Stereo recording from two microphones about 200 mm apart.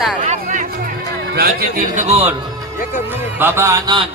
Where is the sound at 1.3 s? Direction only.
55° right (ahead or behind).